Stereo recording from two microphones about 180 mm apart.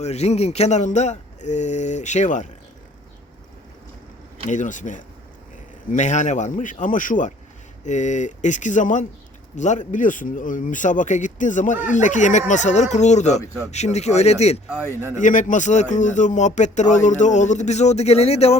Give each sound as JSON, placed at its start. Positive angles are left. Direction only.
{"t": 0.0, "sound": "speech", "side_deg": 35}
{"t": 4.4, "sound": "speech", "side_deg": 45}
{"t": 14.7, "sound": "speech", "side_deg": -10}
{"t": 15.2, "sound": "speech", "side_deg": 45}